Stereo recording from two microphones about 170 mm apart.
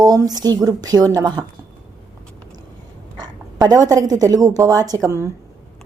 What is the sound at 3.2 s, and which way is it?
A woman's voice, 20° right (ahead or behind).